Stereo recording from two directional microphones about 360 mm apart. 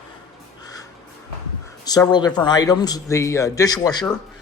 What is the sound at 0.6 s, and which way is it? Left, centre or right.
Crow, centre.